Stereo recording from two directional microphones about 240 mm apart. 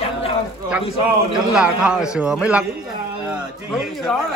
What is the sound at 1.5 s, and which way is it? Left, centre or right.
A man's voice, centre.